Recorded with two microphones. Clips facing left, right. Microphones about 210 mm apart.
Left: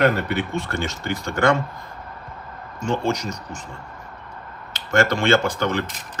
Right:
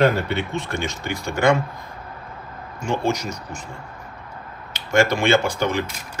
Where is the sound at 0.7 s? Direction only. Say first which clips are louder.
Left 1 dB; 15° right (ahead or behind).